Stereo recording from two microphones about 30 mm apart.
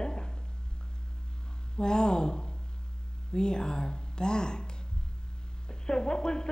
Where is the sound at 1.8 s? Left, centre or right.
Left.